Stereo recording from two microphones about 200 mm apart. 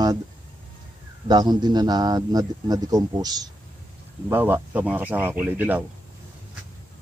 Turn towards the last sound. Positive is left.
turn(degrees=-10)  # may be behind; listen again after turning